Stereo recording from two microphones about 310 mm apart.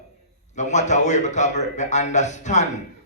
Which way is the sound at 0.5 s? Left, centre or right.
Left.